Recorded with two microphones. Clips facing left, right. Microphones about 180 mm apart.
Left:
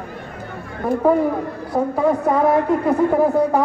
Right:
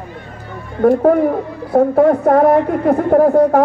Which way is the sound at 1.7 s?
55° right (ahead or behind).